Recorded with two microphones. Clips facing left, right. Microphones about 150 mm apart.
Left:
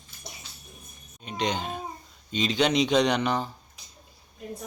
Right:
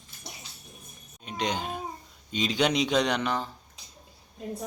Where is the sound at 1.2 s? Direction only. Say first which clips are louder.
Left 1 dB; 5° right (ahead or behind).